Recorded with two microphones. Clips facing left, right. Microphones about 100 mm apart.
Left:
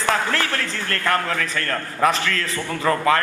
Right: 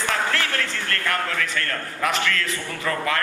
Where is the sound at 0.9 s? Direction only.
35° left (ahead or behind).